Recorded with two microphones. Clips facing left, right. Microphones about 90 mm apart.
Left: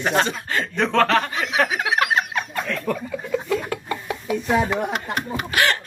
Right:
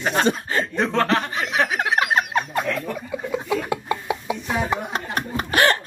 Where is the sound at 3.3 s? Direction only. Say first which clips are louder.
Left 1 dB; 20° right (ahead or behind).